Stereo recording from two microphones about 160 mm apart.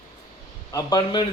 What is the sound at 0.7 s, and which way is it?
Speech, 25° left (ahead or behind).